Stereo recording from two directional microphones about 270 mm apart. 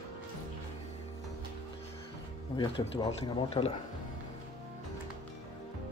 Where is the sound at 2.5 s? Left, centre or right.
Centre.